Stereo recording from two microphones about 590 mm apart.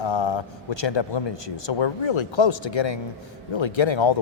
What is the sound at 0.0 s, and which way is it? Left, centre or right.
A man's voice, left.